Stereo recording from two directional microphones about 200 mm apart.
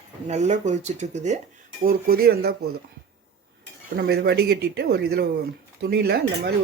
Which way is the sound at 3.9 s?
50° right (ahead or behind).